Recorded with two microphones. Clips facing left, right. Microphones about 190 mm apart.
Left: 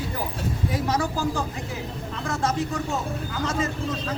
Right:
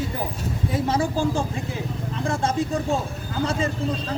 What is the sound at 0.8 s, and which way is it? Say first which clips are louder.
A man's voice: right 3 dB; 25° right (ahead or behind).